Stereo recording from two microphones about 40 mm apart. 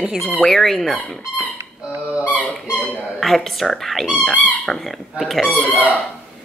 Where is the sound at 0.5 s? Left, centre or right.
Centre.